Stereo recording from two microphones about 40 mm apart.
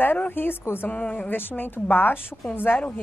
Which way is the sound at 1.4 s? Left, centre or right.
Left.